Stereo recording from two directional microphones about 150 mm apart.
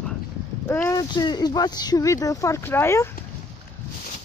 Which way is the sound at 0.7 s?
15° left (ahead or behind).